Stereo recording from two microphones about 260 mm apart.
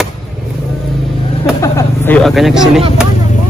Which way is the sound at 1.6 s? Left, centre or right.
Centre.